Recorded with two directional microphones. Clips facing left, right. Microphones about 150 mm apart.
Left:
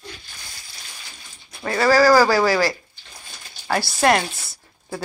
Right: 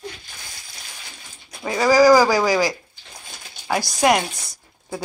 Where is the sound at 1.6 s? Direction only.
15° right (ahead or behind).